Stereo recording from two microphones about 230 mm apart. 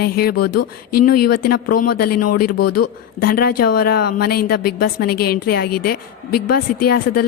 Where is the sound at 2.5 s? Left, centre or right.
Left.